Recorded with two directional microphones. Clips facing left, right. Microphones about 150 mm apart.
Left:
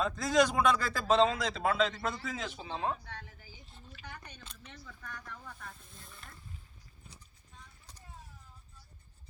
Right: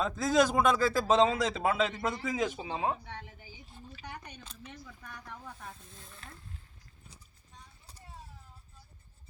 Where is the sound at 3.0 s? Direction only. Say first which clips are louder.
Right 3 dB; 20° right (ahead or behind).